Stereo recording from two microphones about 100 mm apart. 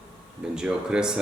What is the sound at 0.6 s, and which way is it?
Speech, 10° right (ahead or behind).